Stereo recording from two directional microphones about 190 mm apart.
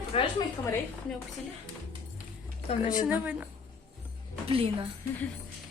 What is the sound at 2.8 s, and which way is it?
Speech, 5° right (ahead or behind).